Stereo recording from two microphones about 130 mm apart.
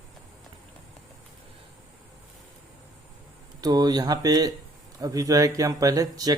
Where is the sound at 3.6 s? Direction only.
30° right (ahead or behind).